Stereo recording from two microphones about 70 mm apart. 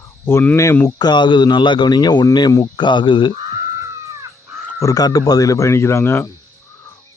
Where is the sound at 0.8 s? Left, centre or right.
Left.